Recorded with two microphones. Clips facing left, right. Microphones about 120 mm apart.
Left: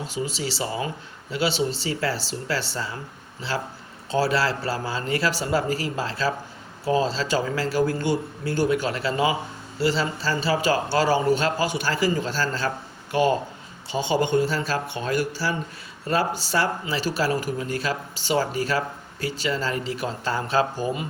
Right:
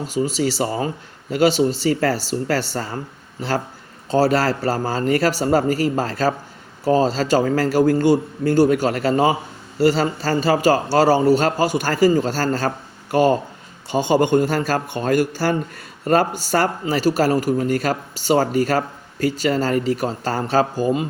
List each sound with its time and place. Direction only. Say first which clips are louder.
0.1 s speech: right 11 dB; 45° right (ahead or behind)
4.1 s speech: right 5 dB; 45° right (ahead or behind)